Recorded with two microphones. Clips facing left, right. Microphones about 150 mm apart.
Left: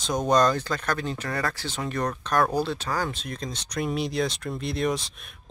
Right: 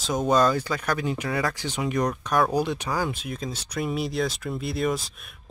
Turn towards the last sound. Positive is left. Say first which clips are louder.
# even
turn(degrees=0)  # may be behind; listen again after turning